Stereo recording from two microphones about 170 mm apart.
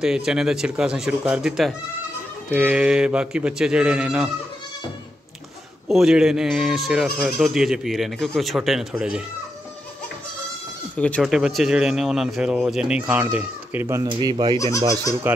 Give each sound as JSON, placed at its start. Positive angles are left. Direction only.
{"t": 0.0, "sound": "speech", "side_deg": -5}
{"t": 5.9, "sound": "speech", "side_deg": 0}
{"t": 11.0, "sound": "speech", "side_deg": 5}
{"t": 14.0, "sound": "speech", "side_deg": -25}
{"t": 15.3, "sound": "speech", "side_deg": -10}